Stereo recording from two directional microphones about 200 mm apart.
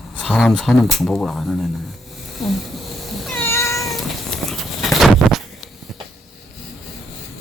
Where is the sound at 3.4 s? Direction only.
15° left (ahead or behind).